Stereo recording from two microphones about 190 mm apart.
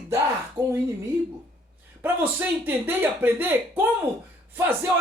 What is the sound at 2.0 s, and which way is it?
Speech, 10° right (ahead or behind).